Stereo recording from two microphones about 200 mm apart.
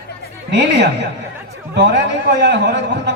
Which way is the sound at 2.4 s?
60° right (ahead or behind).